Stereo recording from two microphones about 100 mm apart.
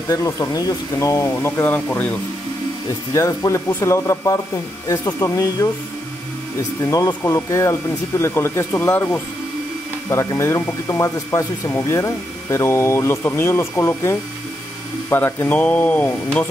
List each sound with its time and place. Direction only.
0.1 s speech: 35° left (ahead or behind)
1.7 s speech: 15° left (ahead or behind)
3.1 s speech: 35° left (ahead or behind)
6.8 s speech: 40° left (ahead or behind); by 16.1 s 15° left (ahead or behind)